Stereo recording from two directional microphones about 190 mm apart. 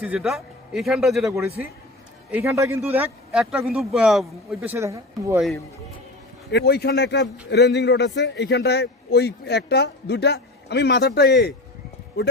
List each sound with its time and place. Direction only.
0.0 s a man's voice: 5° right (ahead or behind)
2.3 s a man's voice: 15° right (ahead or behind)
6.5 s a man's voice: 60° left (ahead or behind)